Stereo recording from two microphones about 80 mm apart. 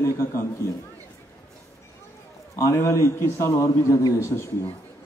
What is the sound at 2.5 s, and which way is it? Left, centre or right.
Speech, left.